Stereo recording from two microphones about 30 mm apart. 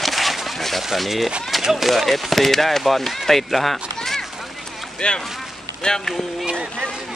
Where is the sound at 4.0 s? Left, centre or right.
Centre.